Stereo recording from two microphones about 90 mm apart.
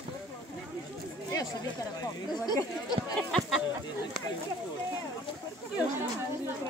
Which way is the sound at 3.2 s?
10° left (ahead or behind).